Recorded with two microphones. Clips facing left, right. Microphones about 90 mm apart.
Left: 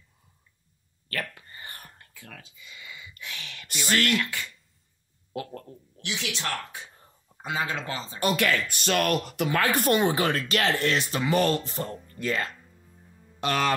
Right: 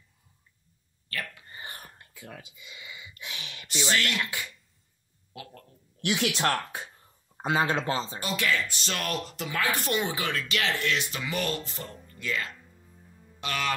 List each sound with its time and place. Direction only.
1.5 s whispering: 20° right (ahead or behind)
4.2 s speech: 15° right (ahead or behind)
5.3 s speech: 45° left (ahead or behind)
6.0 s speech: 55° right (ahead or behind)
7.4 s speech: 30° right (ahead or behind)
8.2 s speech: 55° left (ahead or behind)
12.6 s music: centre (ahead or behind)
13.4 s music: 40° left (ahead or behind)